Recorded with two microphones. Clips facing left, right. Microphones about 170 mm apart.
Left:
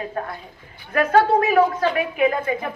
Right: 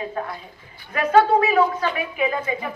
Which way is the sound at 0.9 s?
50° left (ahead or behind).